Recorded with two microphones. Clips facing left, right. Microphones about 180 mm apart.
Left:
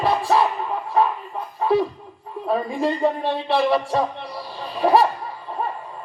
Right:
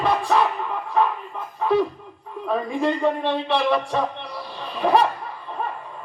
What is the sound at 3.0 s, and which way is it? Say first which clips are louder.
Speech: even; 35° left (ahead or behind).